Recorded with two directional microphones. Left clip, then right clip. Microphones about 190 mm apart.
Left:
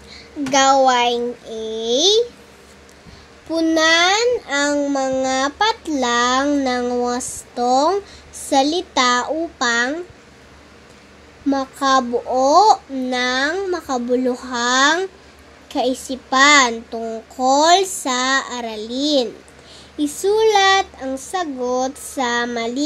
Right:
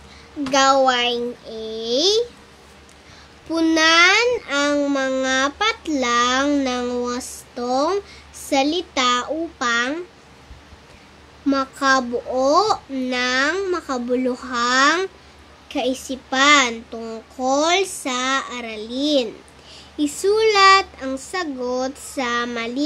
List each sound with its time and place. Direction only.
0.5 s a child's voice: 10° left (ahead or behind)
3.4 s a child's voice: 5° right (ahead or behind)
3.8 s a child's voice: 25° right (ahead or behind)
4.7 s a child's voice: centre (ahead or behind)
11.4 s a child's voice: 5° left (ahead or behind)
15.7 s a woman's voice: 15° right (ahead or behind)
16.5 s a child's voice: 10° left (ahead or behind)
18.7 s a child's voice: 15° right (ahead or behind)
20.0 s a child's voice: centre (ahead or behind)